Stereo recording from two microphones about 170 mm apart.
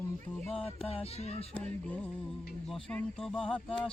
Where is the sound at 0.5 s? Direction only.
35° left (ahead or behind).